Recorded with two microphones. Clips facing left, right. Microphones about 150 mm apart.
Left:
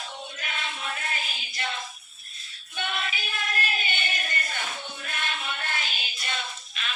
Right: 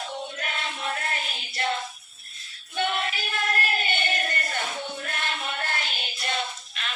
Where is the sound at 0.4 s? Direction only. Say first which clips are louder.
Even; 50° right (ahead or behind).